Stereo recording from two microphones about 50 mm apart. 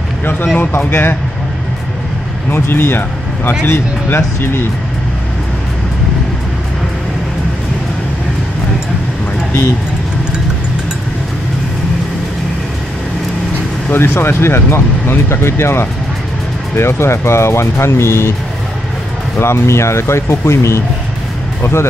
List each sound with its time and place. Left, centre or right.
0.2 s speech: left
2.5 s speech: left
13.9 s speech: left
19.3 s speech: left